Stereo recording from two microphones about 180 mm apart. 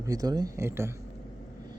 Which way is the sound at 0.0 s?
20° right (ahead or behind).